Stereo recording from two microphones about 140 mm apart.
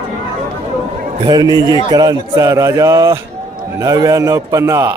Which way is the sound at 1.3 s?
30° right (ahead or behind).